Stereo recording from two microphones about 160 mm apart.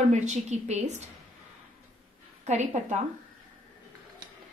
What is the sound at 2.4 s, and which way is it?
Speech, 45° right (ahead or behind).